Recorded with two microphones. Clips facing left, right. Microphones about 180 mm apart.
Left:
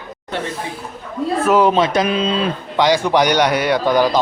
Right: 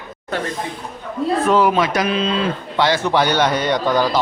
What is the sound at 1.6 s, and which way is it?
A man's voice, 20° left (ahead or behind).